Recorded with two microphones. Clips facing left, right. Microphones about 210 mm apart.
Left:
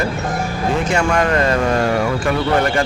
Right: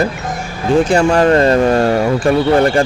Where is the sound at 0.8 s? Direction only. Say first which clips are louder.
Right 4 dB; 30° right (ahead or behind).